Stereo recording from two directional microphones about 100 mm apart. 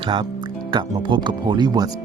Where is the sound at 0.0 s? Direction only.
60° right (ahead or behind).